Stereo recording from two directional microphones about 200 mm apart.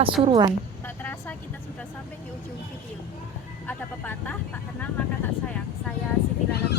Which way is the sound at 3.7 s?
10° left (ahead or behind).